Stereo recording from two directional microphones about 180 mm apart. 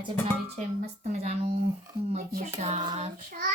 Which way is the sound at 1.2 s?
35° right (ahead or behind).